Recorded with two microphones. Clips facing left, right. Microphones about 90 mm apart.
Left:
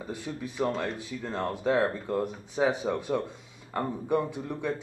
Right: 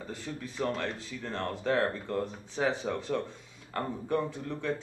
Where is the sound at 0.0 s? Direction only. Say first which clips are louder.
Left 3 dB; 15° left (ahead or behind).